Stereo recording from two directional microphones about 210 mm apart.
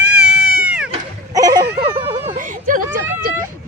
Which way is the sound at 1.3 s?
15° right (ahead or behind).